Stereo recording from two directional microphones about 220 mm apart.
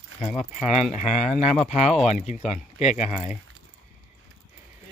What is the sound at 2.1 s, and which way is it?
Speech, 35° left (ahead or behind).